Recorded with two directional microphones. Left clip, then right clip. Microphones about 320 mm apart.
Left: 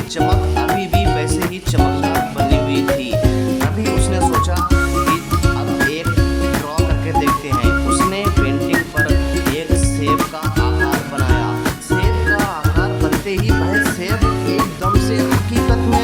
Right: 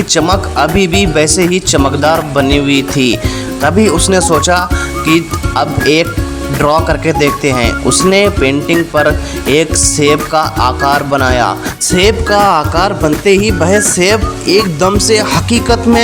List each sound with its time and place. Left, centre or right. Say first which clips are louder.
0.1 s speech: right 5 dB; left
7.2 s speech: right 6 dB; left
9.6 s speech: right 10 dB; left